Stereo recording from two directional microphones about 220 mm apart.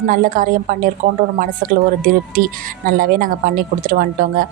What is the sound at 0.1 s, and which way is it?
A woman's voice, 40° right (ahead or behind).